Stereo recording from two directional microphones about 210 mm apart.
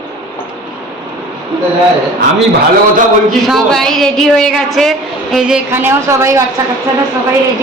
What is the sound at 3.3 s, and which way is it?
A woman's voice, centre (ahead or behind).